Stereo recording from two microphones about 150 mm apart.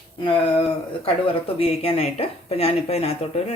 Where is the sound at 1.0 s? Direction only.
40° left (ahead or behind).